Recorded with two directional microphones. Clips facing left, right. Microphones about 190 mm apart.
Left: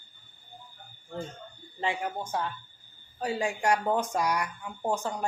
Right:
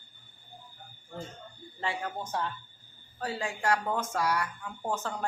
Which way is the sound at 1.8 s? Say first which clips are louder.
Left 3 dB; 15° left (ahead or behind).